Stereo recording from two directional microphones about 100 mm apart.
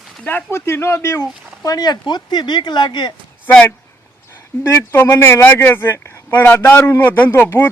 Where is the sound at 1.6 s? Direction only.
40° left (ahead or behind).